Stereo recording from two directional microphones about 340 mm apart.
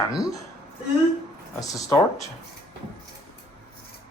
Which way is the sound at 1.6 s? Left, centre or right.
Centre.